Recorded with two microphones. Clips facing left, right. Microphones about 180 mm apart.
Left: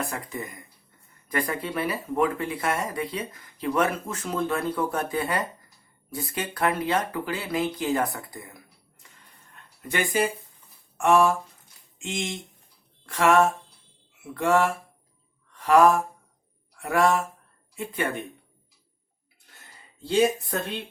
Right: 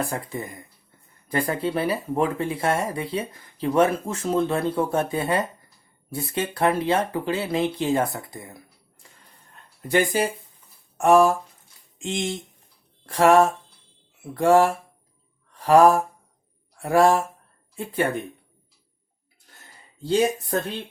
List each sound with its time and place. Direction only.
0.1 s speech: 30° right (ahead or behind)
9.9 s speech: 35° right (ahead or behind)
15.5 s mantra: 30° right (ahead or behind)
16.7 s speech: 30° right (ahead or behind)
20.1 s speech: 35° right (ahead or behind)